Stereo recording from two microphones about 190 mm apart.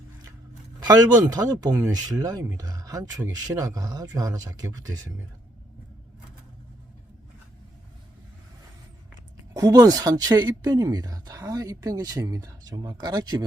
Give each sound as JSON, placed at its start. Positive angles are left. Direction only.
{"t": 0.8, "sound": "speech", "side_deg": -20}
{"t": 9.6, "sound": "speech", "side_deg": -20}